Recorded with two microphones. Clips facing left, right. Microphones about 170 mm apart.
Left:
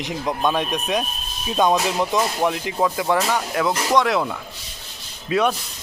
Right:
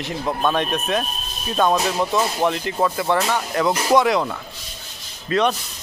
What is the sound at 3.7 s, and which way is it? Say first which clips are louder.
Speech: right 3 dB; 10° right (ahead or behind).